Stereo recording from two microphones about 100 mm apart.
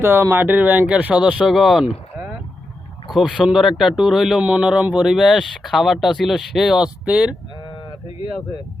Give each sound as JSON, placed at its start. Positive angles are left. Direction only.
{"t": 0.0, "sound": "speech", "side_deg": -25}
{"t": 3.1, "sound": "speech", "side_deg": -5}